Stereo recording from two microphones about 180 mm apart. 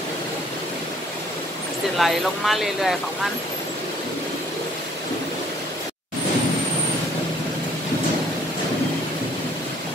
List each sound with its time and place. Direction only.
2.0 s speech: centre (ahead or behind)